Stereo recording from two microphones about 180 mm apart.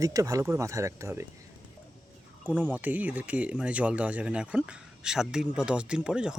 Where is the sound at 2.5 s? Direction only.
10° right (ahead or behind).